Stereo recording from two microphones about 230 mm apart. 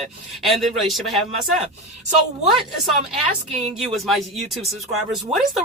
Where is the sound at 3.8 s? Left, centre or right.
Centre.